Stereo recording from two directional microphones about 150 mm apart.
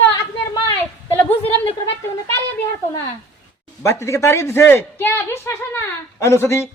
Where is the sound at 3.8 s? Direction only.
20° left (ahead or behind).